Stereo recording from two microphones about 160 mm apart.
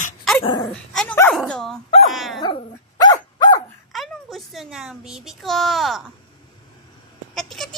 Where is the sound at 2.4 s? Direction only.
25° left (ahead or behind).